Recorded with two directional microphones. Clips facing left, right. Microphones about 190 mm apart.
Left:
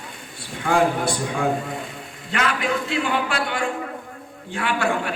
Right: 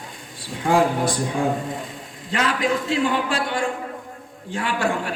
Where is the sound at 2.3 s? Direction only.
35° right (ahead or behind).